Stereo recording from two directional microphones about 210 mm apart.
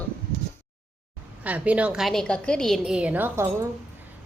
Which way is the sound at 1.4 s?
5° right (ahead or behind).